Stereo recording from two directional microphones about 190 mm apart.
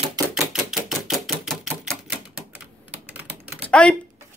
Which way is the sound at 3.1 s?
10° right (ahead or behind).